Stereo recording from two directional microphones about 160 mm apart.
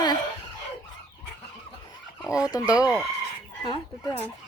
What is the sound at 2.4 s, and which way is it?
Speech, 25° left (ahead or behind).